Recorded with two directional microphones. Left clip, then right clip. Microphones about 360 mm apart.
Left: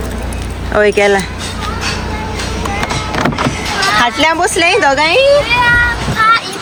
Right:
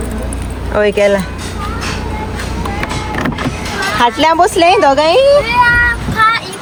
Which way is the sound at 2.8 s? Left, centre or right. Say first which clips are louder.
Left 3 dB; centre.